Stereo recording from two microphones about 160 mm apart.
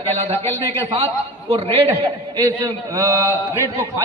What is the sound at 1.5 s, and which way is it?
Speech, 35° right (ahead or behind).